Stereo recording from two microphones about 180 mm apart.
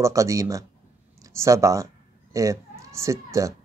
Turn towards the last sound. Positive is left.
turn(degrees=-15)  # may be behind; listen again after turning